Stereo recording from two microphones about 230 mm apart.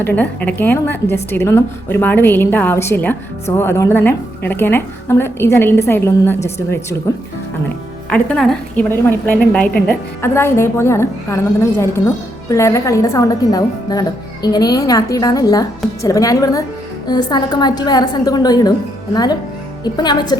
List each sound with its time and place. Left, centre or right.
0.0 s a woman's voice: centre
8.1 s a woman's voice: centre